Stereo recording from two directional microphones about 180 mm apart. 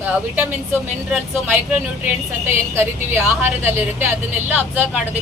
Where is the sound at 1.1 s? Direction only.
5° right (ahead or behind).